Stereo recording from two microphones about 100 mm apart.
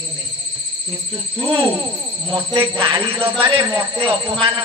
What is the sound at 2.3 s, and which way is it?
Speech, 55° right (ahead or behind).